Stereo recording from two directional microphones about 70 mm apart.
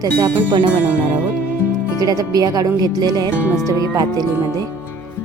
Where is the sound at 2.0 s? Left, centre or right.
Right.